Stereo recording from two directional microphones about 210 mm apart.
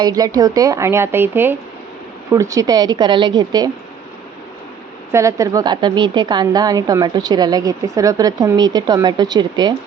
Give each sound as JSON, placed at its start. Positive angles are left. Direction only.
{"t": 0.0, "sound": "a woman's voice", "side_deg": -15}
{"t": 5.1, "sound": "a woman's voice", "side_deg": -15}